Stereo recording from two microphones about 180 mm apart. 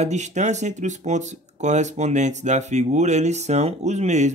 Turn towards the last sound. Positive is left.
turn(degrees=-40)  # may be behind; listen again after turning